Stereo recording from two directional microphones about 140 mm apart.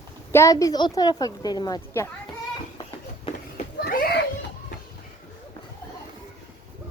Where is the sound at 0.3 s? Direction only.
20° left (ahead or behind).